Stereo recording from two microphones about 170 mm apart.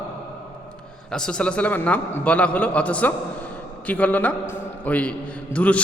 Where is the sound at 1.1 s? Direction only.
5° left (ahead or behind).